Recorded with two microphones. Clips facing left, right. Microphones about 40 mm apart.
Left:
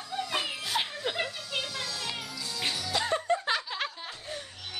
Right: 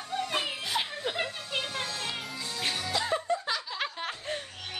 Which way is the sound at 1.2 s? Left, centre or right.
Right.